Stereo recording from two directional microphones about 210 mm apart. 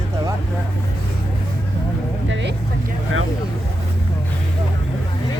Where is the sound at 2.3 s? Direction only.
60° right (ahead or behind).